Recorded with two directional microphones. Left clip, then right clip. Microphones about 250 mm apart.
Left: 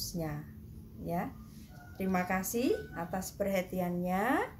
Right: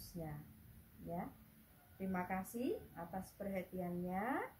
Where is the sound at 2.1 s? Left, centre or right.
Left.